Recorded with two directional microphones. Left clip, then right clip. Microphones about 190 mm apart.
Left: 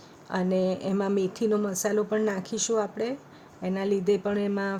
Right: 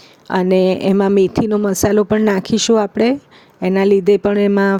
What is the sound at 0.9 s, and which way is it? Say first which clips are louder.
Speech: right 14 dB; 40° right (ahead or behind).